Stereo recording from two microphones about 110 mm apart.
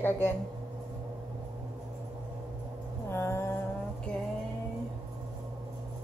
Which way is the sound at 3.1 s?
25° left (ahead or behind).